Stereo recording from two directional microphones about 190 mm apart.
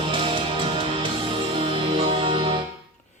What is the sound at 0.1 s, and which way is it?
Music, 25° right (ahead or behind).